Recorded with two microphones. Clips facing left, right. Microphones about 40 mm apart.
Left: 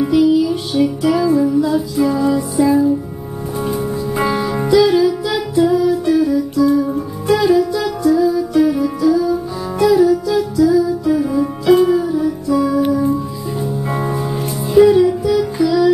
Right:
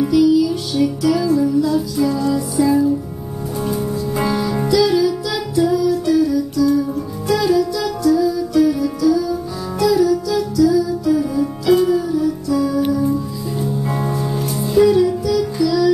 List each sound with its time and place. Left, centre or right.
0.0 s music: left